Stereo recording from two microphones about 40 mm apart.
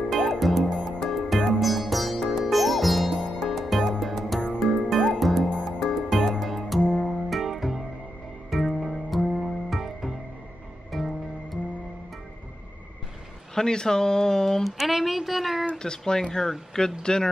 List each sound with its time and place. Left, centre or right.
0.1 s music: centre
13.6 s speech: centre
14.6 s speech: centre
16.1 s speech: centre